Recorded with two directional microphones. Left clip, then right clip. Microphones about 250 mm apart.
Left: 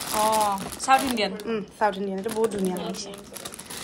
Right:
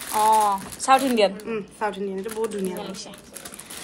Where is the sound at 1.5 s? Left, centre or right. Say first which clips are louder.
Left 3 dB; centre.